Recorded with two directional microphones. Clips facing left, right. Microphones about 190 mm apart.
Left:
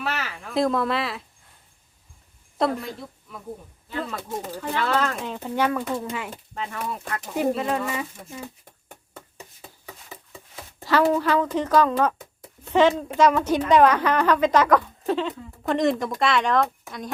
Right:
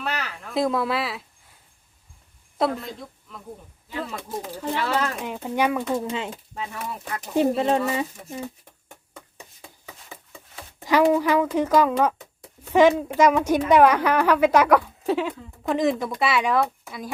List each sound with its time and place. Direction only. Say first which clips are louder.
0.0 s speech: even; centre (ahead or behind)
2.6 s speech: even; centre (ahead or behind)
4.7 s a woman's voice: left 1 dB; 10° right (ahead or behind)
6.3 s speech: left 1 dB; 5° right (ahead or behind)
7.3 s speech: right 4 dB; 30° right (ahead or behind)
10.8 s a woman's voice: right 2 dB; 15° right (ahead or behind)